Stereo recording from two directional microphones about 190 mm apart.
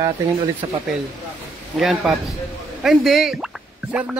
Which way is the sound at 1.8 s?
Centre (ahead or behind).